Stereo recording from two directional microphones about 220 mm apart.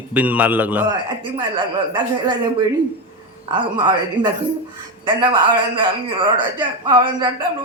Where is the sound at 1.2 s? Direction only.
20° right (ahead or behind).